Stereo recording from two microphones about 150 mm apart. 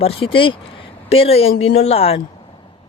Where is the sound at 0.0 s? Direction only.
35° left (ahead or behind).